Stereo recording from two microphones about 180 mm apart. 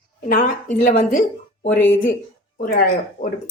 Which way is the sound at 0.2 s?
50° left (ahead or behind).